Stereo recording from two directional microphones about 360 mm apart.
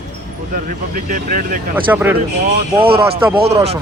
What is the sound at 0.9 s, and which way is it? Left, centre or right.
Speech, right.